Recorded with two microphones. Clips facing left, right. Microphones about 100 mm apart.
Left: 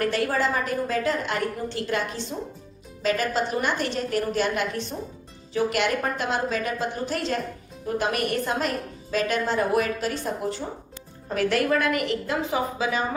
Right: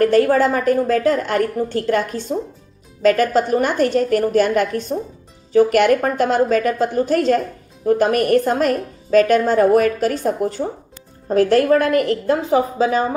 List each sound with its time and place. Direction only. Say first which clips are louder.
0.0 s a woman's voice: right 10 dB; 45° right (ahead or behind)